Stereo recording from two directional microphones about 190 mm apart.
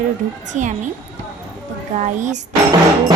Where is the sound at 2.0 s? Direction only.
40° right (ahead or behind).